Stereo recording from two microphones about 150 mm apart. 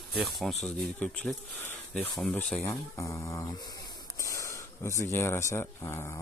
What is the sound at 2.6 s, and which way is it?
Speech, 20° left (ahead or behind).